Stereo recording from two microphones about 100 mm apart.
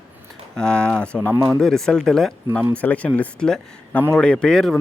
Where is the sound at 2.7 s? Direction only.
15° left (ahead or behind).